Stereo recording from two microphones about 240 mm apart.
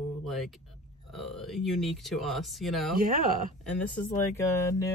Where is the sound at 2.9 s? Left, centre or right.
Right.